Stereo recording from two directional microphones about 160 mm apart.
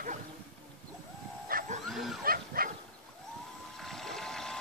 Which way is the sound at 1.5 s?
60° right (ahead or behind).